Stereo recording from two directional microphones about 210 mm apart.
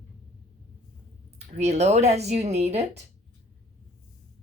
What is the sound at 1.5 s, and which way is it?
A woman's voice, 30° right (ahead or behind).